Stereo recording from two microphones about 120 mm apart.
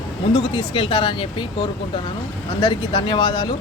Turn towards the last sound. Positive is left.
turn(degrees=35)  # may be behind; listen again after turning